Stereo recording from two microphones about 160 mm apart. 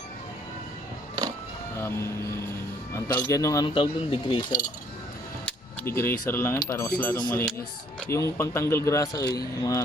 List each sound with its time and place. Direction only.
1.7 s speech: 15° left (ahead or behind)
3.8 s speech: 30° left (ahead or behind)
4.4 s speech: 55° left (ahead or behind)
5.5 s speech: 15° left (ahead or behind)